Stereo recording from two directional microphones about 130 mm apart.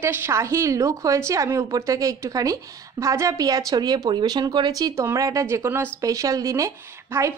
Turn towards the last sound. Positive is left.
turn(degrees=-20)  # may be behind; listen again after turning